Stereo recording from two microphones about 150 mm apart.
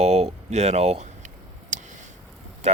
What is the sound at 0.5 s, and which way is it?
Speech, 45° right (ahead or behind).